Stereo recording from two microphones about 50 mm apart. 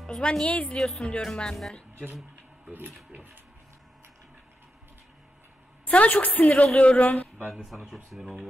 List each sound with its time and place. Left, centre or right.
0.0 s a woman's voice: centre
5.9 s a woman's voice: left
7.6 s speech: centre